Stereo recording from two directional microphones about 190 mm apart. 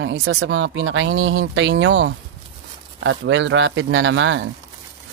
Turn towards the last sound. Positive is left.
turn(degrees=-80)